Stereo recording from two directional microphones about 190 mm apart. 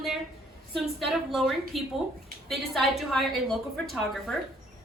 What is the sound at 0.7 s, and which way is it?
A woman's voice, centre (ahead or behind).